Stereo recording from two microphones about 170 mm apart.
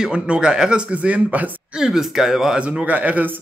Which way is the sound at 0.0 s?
5° right (ahead or behind).